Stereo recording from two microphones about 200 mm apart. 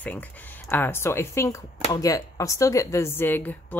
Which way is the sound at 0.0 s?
10° left (ahead or behind).